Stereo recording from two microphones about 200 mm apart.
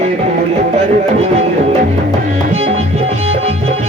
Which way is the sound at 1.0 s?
30° right (ahead or behind).